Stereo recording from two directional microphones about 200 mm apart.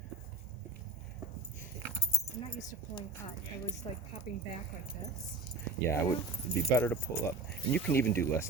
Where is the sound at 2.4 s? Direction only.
25° left (ahead or behind).